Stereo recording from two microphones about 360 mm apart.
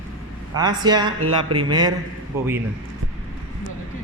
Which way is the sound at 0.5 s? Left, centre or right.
Centre.